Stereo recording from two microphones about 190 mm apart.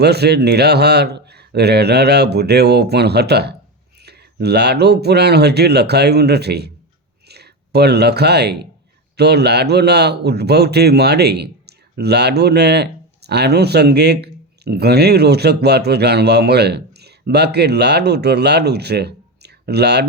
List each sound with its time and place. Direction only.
0.0 s a man's voice: 60° right (ahead or behind)